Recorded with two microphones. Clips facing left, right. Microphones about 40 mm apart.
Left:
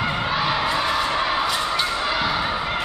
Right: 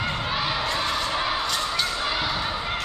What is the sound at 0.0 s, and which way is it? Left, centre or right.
Crowd, centre.